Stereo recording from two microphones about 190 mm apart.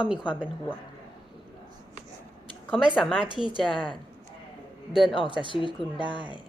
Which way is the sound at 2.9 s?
5° left (ahead or behind).